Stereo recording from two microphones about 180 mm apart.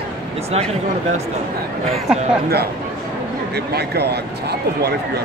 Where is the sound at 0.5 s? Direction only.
35° right (ahead or behind).